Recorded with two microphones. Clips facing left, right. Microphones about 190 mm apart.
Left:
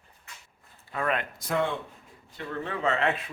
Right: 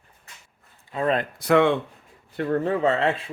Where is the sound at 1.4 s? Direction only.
75° right (ahead or behind).